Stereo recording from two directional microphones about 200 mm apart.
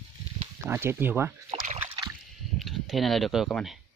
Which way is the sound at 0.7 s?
10° right (ahead or behind).